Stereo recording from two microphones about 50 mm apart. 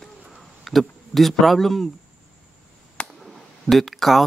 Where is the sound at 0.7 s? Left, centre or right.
Centre.